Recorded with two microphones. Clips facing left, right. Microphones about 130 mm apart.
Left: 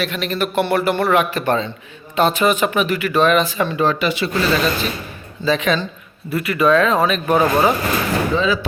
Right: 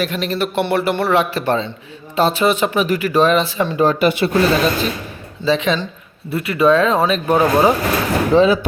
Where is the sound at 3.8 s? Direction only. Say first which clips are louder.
Right 5 dB; 45° right (ahead or behind).